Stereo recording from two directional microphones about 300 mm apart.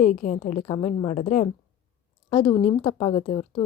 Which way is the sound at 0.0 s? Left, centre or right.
Left.